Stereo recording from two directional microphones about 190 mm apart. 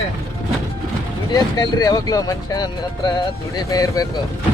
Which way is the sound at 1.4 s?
20° left (ahead or behind).